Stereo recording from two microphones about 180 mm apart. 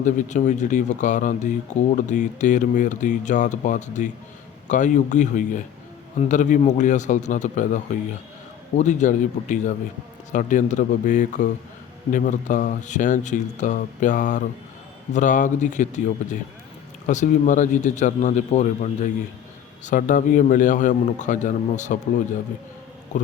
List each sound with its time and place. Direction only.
0.0 s speech: 45° left (ahead or behind)
8.8 s speech: 45° left (ahead or behind)